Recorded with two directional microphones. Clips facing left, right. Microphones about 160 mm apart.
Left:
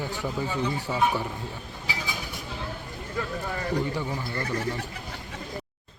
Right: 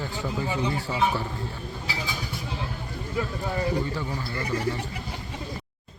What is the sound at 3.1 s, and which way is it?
Speech, 10° right (ahead or behind).